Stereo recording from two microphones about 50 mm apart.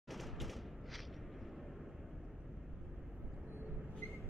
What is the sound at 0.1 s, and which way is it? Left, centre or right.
Thump, centre.